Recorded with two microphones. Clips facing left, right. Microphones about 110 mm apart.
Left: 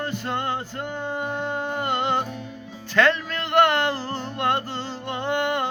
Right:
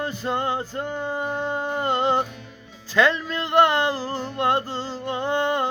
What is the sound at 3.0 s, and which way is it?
Music, 15° right (ahead or behind).